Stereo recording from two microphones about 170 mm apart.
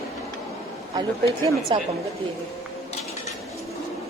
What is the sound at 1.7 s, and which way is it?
Speech, 30° right (ahead or behind).